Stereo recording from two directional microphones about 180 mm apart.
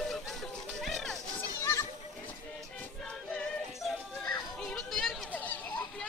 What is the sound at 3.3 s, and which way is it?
Music, 5° left (ahead or behind).